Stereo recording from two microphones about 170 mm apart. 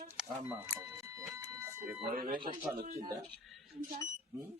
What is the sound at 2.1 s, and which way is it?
Speech, 60° right (ahead or behind).